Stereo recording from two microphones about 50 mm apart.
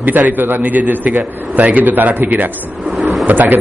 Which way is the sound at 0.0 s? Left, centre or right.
Right.